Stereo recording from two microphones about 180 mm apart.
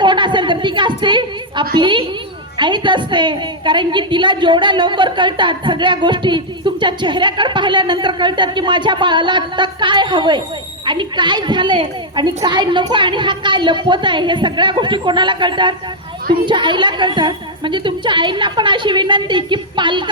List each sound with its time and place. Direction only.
0.0 s a woman's voice: 25° right (ahead or behind)